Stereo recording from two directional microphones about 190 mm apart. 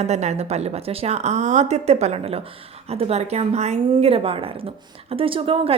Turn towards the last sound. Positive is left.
turn(degrees=-30)  # may be behind; listen again after turning